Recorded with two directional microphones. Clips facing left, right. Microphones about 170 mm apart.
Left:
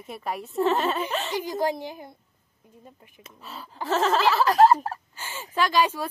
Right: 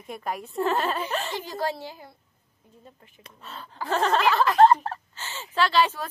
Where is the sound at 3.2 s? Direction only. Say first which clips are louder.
Left 1 dB; 5° left (ahead or behind).